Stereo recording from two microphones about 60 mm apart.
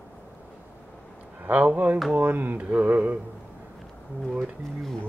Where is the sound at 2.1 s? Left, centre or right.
Right.